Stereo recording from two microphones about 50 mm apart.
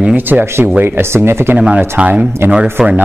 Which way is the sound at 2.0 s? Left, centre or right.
Right.